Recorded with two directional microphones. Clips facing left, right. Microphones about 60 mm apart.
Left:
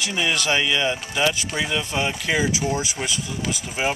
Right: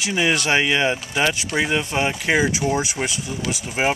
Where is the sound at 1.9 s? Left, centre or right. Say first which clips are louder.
Right 2 dB; right.